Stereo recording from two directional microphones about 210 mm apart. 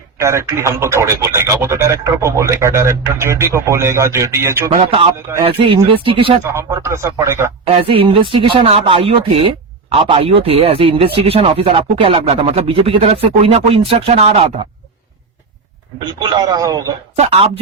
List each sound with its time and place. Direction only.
0.2 s speech: 15° right (ahead or behind)
4.7 s speech: 30° right (ahead or behind)
6.4 s speech: 15° right (ahead or behind)
7.6 s speech: 25° right (ahead or behind)
16.0 s speech: 20° right (ahead or behind)
17.2 s speech: 30° right (ahead or behind)